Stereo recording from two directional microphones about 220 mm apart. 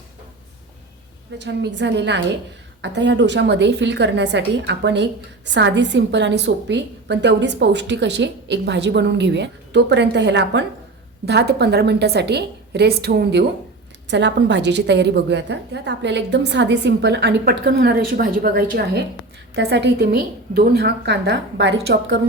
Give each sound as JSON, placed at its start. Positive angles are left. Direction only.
{"t": 1.4, "sound": "a woman's voice", "side_deg": -50}